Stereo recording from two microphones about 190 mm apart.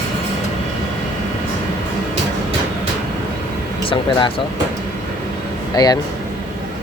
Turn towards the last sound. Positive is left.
turn(degrees=20)  # may be behind; listen again after turning